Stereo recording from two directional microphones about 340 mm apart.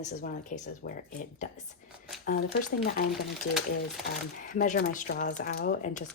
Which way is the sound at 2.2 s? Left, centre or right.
Left.